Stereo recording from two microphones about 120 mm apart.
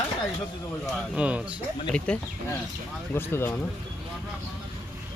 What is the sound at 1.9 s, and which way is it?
Speech, 10° left (ahead or behind).